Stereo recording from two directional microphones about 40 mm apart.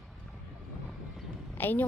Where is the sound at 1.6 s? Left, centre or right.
Left.